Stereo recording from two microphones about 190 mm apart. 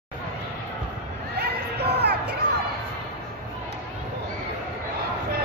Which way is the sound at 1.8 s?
60° right (ahead or behind).